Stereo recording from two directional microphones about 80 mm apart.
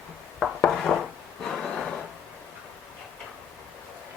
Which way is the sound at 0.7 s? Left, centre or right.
Centre.